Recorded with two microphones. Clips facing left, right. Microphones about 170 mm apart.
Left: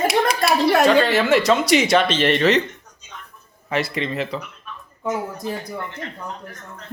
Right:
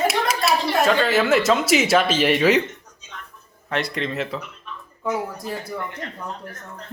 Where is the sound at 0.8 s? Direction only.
Centre (ahead or behind).